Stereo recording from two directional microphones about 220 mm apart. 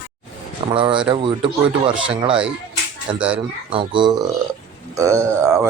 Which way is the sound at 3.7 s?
20° right (ahead or behind).